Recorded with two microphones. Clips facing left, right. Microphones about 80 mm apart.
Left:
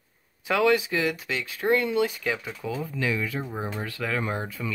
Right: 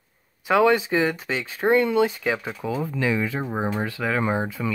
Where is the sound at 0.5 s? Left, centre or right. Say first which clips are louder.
Right 4 dB; right.